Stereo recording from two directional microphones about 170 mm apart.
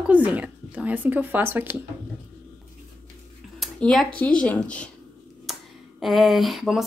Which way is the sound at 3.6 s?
Centre (ahead or behind).